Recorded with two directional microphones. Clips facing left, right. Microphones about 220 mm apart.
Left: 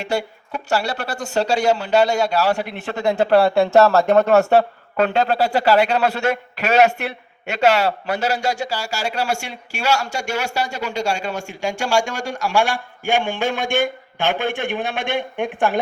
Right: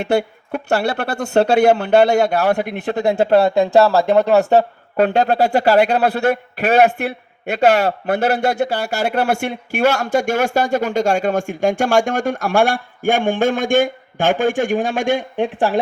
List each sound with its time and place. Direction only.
0.0 s speech: 60° right (ahead or behind)
2.8 s speech: 35° right (ahead or behind)
3.2 s speech: 25° right (ahead or behind)
4.9 s a man's voice: 40° right (ahead or behind)